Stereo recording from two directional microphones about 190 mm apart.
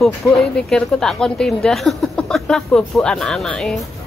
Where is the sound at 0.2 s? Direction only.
15° left (ahead or behind).